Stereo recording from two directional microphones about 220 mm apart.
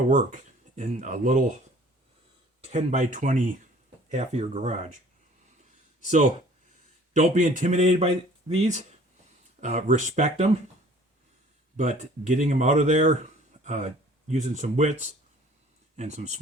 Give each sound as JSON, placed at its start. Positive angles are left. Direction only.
{"t": 0.1, "sound": "speech", "side_deg": -35}
{"t": 2.6, "sound": "speech", "side_deg": -35}
{"t": 7.1, "sound": "speech", "side_deg": -35}
{"t": 11.8, "sound": "speech", "side_deg": -35}